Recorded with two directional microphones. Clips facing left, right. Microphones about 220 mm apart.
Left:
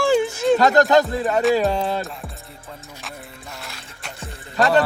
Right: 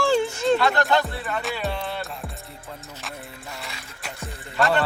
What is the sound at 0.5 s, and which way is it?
Music, 40° left (ahead or behind).